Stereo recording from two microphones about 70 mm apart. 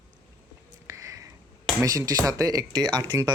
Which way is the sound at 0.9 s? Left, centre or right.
Right.